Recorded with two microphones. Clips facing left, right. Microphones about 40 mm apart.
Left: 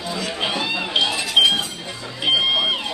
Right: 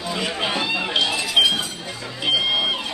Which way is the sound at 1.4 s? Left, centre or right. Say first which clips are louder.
Left 2 dB; centre.